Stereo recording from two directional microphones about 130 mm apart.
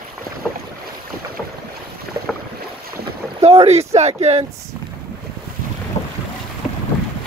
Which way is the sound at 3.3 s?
50° right (ahead or behind).